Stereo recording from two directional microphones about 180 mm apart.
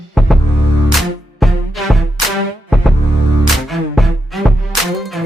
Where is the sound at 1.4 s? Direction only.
Centre (ahead or behind).